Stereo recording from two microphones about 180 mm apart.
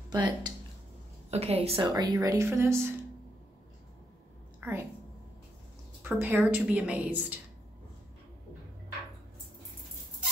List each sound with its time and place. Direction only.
0.1 s speech: 25° right (ahead or behind)
1.3 s a woman's voice: 35° right (ahead or behind)
1.9 s a woman's voice: 20° right (ahead or behind)
4.6 s a sound: 10° right (ahead or behind)
6.0 s a woman's voice: 10° right (ahead or behind)